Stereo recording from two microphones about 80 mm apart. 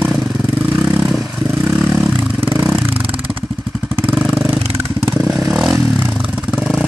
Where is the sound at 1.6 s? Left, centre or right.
Right.